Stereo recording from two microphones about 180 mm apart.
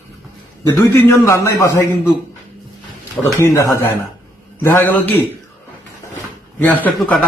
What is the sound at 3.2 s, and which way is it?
Speech, 10° left (ahead or behind).